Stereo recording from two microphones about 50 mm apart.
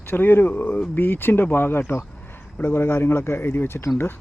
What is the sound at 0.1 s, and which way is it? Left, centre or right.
Speech, left.